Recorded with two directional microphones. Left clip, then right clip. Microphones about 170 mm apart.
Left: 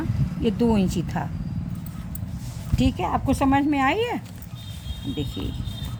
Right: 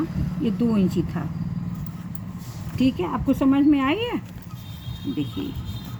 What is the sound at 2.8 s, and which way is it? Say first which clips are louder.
Speech: even; 70° left (ahead or behind).